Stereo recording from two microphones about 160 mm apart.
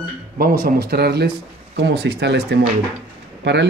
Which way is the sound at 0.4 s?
65° right (ahead or behind).